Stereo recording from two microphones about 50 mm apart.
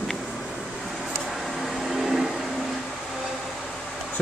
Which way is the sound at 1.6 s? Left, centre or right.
Centre.